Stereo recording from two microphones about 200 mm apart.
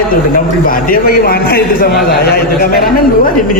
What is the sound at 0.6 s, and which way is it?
A man's voice, 45° left (ahead or behind).